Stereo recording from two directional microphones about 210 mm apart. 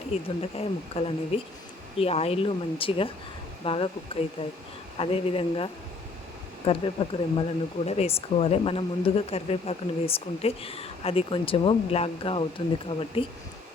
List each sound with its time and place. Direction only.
0.1 s speech: 30° left (ahead or behind)